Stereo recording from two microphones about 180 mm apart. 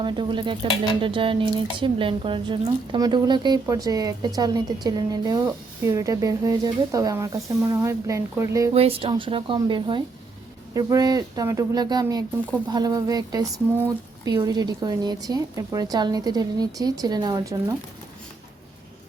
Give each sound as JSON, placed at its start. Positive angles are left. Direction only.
{"t": 0.0, "sound": "speech", "side_deg": -25}
{"t": 8.7, "sound": "speech", "side_deg": -35}